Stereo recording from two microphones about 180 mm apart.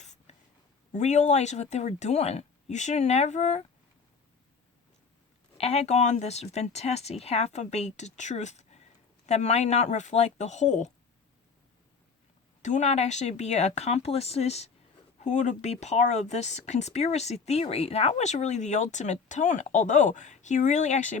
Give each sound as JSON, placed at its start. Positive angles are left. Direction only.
{"t": 0.0, "sound": "a sound", "side_deg": 40}
{"t": 0.9, "sound": "speech", "side_deg": 40}
{"t": 5.5, "sound": "speech", "side_deg": 35}
{"t": 12.6, "sound": "speech", "side_deg": 40}